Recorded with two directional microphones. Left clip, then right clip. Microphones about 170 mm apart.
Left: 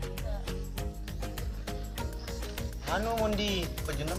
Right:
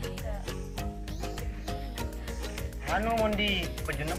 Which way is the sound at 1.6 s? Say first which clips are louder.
Right 2 dB; centre (ahead or behind).